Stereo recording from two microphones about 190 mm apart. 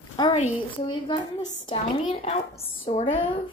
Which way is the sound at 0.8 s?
25° left (ahead or behind).